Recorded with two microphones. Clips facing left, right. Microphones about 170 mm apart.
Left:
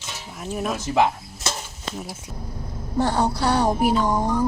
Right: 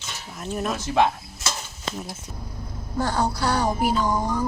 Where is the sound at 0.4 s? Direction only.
5° left (ahead or behind).